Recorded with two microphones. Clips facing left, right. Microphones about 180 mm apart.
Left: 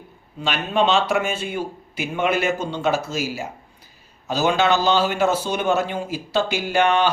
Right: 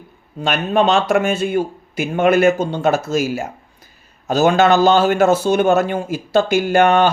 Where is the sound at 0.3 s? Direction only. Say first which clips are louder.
Right 5 dB; 45° right (ahead or behind).